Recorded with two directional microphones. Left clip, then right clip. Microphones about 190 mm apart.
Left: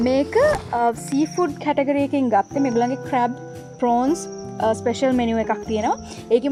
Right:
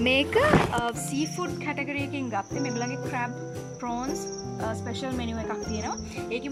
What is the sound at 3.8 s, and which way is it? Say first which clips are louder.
Speech: left 13 dB; 45° left (ahead or behind).